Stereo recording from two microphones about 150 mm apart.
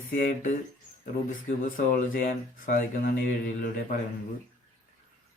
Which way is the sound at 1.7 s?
65° left (ahead or behind).